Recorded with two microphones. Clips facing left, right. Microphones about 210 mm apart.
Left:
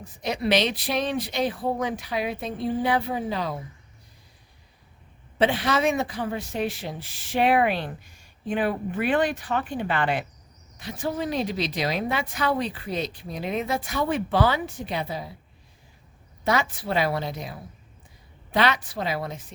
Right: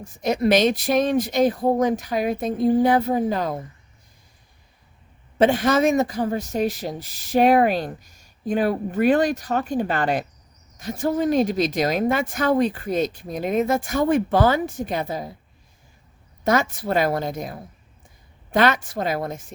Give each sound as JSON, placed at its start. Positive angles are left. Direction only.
{"t": 0.0, "sound": "speech", "side_deg": -45}
{"t": 5.4, "sound": "speech", "side_deg": -45}
{"t": 16.4, "sound": "speech", "side_deg": -45}